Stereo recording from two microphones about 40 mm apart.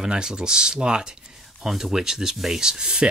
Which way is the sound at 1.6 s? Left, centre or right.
Centre.